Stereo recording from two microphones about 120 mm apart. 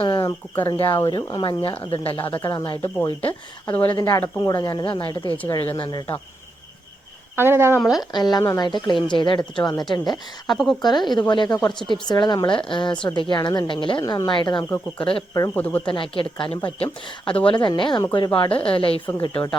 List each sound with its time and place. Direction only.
0.0 s bird: 45° left (ahead or behind)
0.6 s speech: 40° left (ahead or behind)
3.1 s speech: 50° left (ahead or behind)
3.7 s speech: 15° left (ahead or behind); by 6.1 s 40° left (ahead or behind)
7.3 s speech: 20° right (ahead or behind)
7.8 s speech: centre (ahead or behind)
8.1 s speech: 35° left (ahead or behind)
10.5 s speech: centre (ahead or behind)
10.8 s speech: 40° left (ahead or behind)
14.0 s speech: 25° left (ahead or behind)
14.3 s speech: 40° left (ahead or behind)
15.5 s speech: 15° left (ahead or behind)
15.9 s speech: 45° left (ahead or behind)